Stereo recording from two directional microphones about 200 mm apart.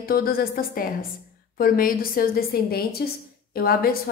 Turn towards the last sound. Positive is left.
turn(degrees=50)  # may be behind; listen again after turning